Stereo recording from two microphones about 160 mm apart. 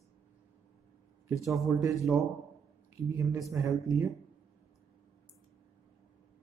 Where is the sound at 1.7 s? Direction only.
20° right (ahead or behind).